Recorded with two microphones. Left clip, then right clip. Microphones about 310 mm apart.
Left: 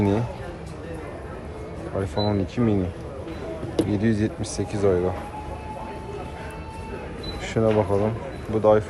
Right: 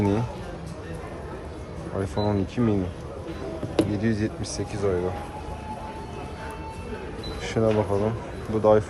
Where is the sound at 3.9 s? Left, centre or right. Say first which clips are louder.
Left 3 dB; centre.